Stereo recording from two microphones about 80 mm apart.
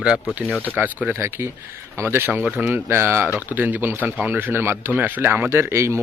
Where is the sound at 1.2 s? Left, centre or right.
Right.